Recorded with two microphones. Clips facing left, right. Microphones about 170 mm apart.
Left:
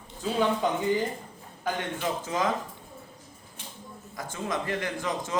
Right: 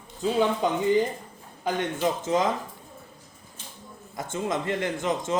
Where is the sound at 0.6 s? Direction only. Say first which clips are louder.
Right 2 dB; 20° right (ahead or behind).